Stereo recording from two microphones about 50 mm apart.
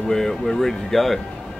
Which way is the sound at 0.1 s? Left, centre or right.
Centre.